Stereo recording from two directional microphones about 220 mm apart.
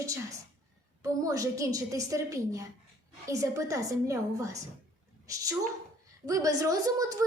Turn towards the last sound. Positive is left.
turn(degrees=-15)  # may be behind; listen again after turning